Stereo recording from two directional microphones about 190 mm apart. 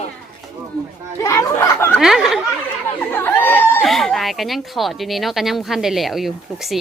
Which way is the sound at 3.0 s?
10° left (ahead or behind).